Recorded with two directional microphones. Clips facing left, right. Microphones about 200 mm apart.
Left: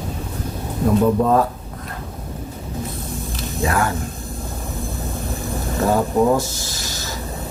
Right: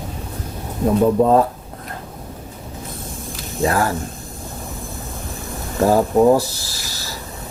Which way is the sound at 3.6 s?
35° right (ahead or behind).